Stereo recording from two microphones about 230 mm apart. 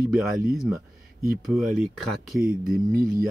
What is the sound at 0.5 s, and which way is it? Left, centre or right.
Speech, centre.